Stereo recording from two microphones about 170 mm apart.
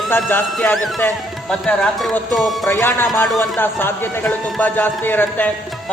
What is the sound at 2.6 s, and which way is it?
Speech, 15° left (ahead or behind).